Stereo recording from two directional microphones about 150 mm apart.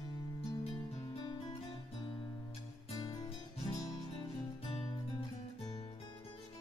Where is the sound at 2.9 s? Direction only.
25° left (ahead or behind).